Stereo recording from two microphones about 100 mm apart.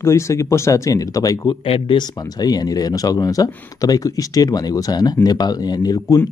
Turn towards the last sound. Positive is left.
turn(degrees=40)  # may be behind; listen again after turning